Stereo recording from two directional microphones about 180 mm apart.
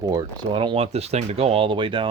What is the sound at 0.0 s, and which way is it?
Speech, 20° right (ahead or behind).